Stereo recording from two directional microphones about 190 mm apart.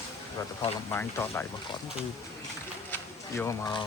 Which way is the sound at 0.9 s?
15° left (ahead or behind).